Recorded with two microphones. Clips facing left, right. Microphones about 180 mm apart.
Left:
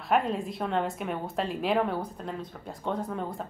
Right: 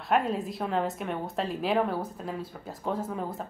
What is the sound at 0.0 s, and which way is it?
A woman's voice, centre (ahead or behind).